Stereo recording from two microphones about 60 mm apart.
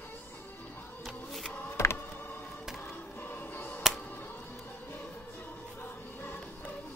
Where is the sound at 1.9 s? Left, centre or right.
Left.